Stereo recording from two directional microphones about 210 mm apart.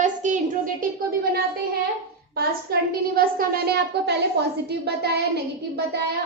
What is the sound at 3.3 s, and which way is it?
A woman's voice, 45° right (ahead or behind).